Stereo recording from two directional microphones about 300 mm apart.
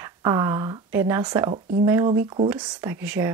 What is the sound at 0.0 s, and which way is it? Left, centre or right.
Speech, centre.